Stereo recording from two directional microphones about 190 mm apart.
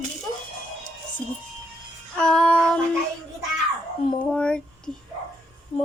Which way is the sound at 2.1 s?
5° left (ahead or behind).